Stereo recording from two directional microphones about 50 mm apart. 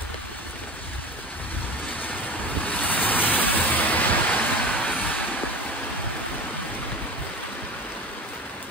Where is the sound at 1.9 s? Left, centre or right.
Left.